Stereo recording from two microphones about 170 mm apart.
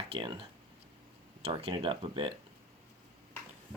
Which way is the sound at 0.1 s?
30° right (ahead or behind).